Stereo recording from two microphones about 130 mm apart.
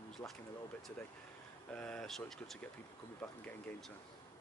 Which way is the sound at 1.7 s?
10° left (ahead or behind).